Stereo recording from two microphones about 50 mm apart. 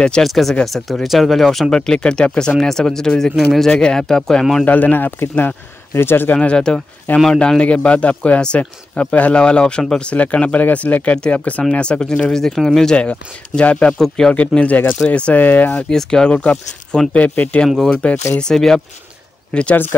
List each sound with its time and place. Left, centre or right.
0.2 s speech: centre
1.8 s speech: centre
3.7 s speech: centre
4.6 s speech: left
6.3 s a man's voice: centre
10.1 s a man's voice: left; by 12.9 s centre
12.9 s a man's voice: left
13.9 s speech: centre
14.5 s a man's voice: left
15.9 s a man's voice: centre
18.4 s a man's voice: centre